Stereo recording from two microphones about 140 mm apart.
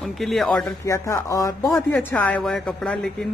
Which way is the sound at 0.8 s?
20° left (ahead or behind).